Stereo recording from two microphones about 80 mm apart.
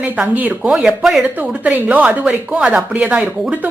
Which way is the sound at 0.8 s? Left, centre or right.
Centre.